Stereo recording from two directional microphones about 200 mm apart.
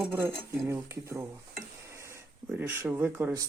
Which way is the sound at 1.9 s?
15° right (ahead or behind).